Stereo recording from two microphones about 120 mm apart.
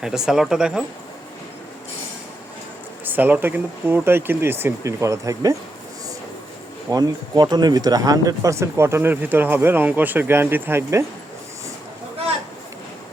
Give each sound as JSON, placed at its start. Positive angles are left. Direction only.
{"t": 0.0, "sound": "speech", "side_deg": -5}
{"t": 3.0, "sound": "speech", "side_deg": -15}
{"t": 6.9, "sound": "speech", "side_deg": -35}